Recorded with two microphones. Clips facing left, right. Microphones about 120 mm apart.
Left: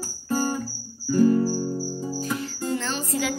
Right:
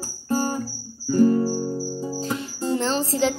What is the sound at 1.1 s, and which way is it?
Music, 35° right (ahead or behind).